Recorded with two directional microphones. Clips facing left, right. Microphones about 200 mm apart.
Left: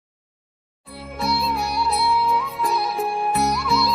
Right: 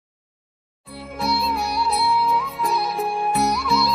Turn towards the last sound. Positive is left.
turn(degrees=0)  # may be behind; listen again after turning